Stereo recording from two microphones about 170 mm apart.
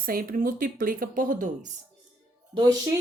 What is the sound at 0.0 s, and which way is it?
Speech, 60° right (ahead or behind).